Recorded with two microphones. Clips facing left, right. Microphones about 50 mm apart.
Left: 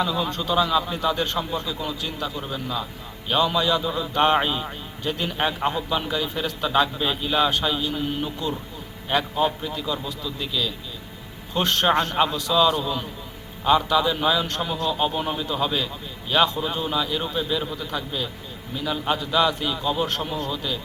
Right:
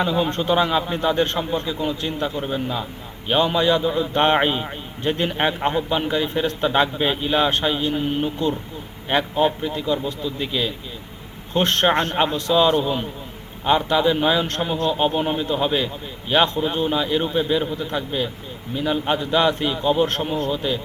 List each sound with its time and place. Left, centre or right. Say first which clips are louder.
0.0 s a man's voice: right 4 dB; right